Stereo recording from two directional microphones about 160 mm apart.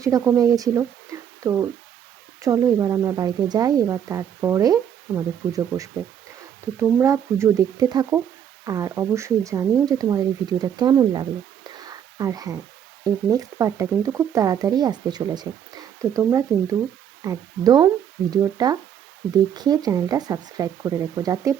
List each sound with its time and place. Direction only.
0.0 s speech: 20° right (ahead or behind)
11.7 s a sound: 25° right (ahead or behind)
13.1 s speech: 20° right (ahead or behind)